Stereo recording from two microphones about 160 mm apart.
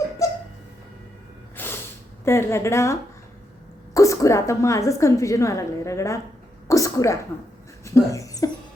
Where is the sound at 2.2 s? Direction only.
15° left (ahead or behind).